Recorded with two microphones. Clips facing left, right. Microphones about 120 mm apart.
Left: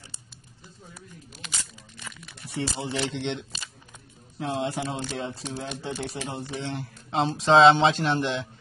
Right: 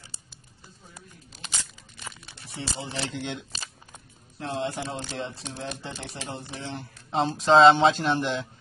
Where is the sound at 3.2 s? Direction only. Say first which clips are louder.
Left 3 dB; 5° right (ahead or behind).